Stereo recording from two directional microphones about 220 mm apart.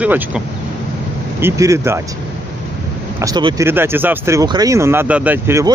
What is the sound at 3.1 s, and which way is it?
Speech, 15° right (ahead or behind).